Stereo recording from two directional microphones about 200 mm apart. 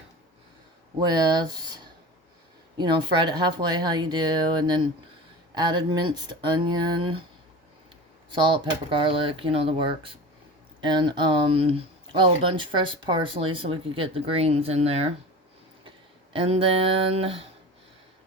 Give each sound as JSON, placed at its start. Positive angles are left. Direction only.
{"t": 0.9, "sound": "speech", "side_deg": -20}
{"t": 2.7, "sound": "speech", "side_deg": -20}
{"t": 8.9, "sound": "speech", "side_deg": -25}
{"t": 16.3, "sound": "speech", "side_deg": -25}